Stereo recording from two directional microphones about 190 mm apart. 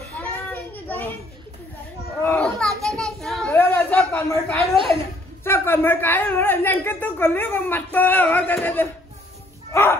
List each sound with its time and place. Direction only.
0.2 s child singing: 10° left (ahead or behind)
2.2 s children playing: 5° left (ahead or behind)
2.8 s child singing: centre (ahead or behind)
3.5 s a sound: 10° left (ahead or behind)
4.7 s a woman's voice: 30° right (ahead or behind)
5.4 s a woman's voice: 10° left (ahead or behind)
9.7 s a sound: 15° left (ahead or behind)